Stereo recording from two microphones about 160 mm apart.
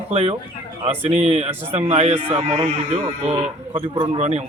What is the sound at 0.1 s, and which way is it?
A man's voice, 40° right (ahead or behind).